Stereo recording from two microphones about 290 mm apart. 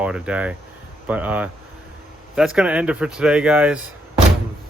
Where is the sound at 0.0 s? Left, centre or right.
Centre.